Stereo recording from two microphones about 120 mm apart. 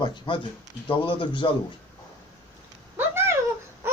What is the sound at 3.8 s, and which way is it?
Wail, 20° right (ahead or behind).